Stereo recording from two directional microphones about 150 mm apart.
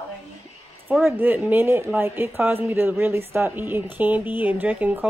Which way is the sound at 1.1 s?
10° right (ahead or behind).